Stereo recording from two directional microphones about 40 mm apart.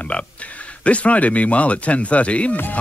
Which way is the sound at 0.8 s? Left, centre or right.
Left.